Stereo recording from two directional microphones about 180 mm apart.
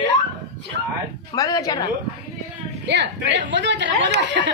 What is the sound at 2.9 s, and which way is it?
Speech, 80° right.